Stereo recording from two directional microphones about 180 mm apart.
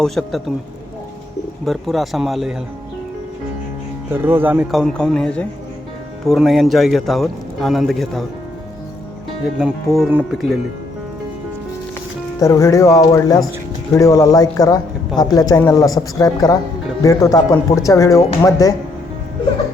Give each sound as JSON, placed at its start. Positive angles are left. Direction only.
{"t": 0.0, "sound": "a man's voice", "side_deg": 0}
{"t": 1.6, "sound": "a man's voice", "side_deg": 0}
{"t": 4.1, "sound": "speech", "side_deg": -10}
{"t": 4.7, "sound": "a man's voice", "side_deg": 0}
{"t": 9.9, "sound": "a man's voice", "side_deg": -5}
{"t": 12.4, "sound": "a man's voice", "side_deg": 15}